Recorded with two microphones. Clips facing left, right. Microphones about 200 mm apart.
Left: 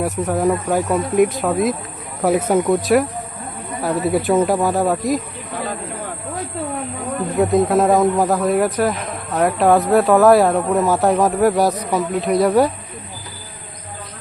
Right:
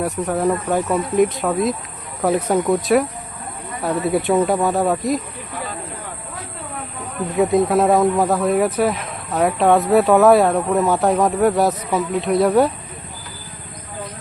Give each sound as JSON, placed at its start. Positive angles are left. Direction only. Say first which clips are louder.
{"t": 0.3, "sound": "speech", "louder": "left 1 dB", "side_deg": 0}
{"t": 7.3, "sound": "speech", "louder": "even", "side_deg": 0}